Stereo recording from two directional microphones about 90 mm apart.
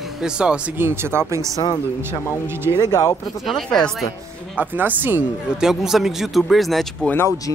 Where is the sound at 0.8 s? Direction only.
25° right (ahead or behind).